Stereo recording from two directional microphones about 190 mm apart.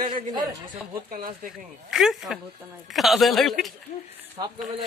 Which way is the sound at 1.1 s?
50° right (ahead or behind).